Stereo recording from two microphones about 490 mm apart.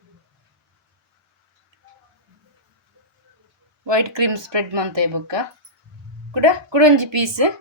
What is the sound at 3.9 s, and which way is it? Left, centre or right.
Speech, right.